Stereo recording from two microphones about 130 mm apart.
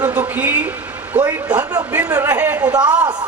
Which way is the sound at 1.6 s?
30° right (ahead or behind).